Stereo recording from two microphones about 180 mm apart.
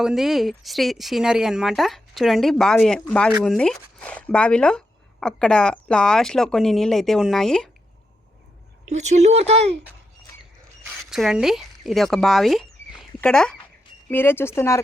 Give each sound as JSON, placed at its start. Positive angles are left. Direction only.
{"t": 0.0, "sound": "speech", "side_deg": 0}
{"t": 8.9, "sound": "speech", "side_deg": -40}
{"t": 11.0, "sound": "speech", "side_deg": 0}